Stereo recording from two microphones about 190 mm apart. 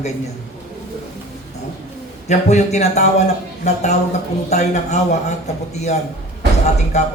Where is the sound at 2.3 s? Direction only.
35° left (ahead or behind).